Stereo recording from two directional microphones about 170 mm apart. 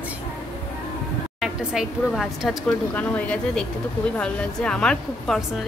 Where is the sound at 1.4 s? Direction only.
Centre (ahead or behind).